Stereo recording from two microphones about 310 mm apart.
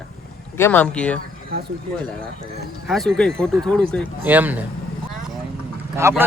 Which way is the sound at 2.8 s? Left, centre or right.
Centre.